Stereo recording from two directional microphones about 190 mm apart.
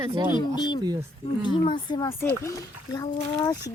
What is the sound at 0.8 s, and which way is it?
Speech, 20° right (ahead or behind).